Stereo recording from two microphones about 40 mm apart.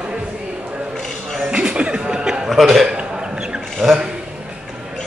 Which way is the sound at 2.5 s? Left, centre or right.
Centre.